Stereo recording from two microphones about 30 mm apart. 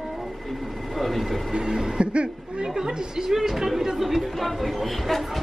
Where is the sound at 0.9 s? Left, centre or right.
Centre.